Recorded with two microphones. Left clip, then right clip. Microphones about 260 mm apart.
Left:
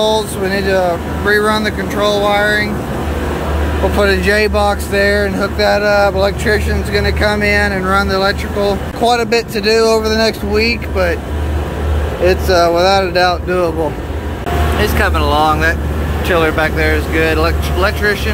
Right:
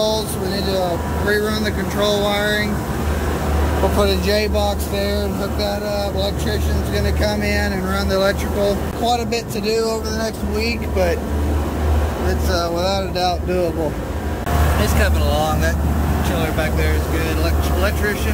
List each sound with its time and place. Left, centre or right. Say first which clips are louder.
0.5 s speech: left 7 dB; centre
4.0 s speech: left 8 dB; centre
9.8 s speech: left 12 dB; left
10.6 s speech: left 4 dB; centre
12.3 s speech: left 11 dB; centre
13.1 s speech: left 7 dB; centre
14.8 s speech: left 6 dB; centre